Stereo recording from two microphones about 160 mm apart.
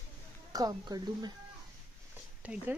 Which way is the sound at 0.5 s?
25° right (ahead or behind).